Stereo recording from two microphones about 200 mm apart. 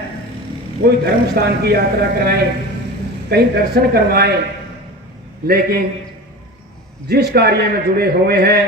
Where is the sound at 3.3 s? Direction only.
55° right (ahead or behind).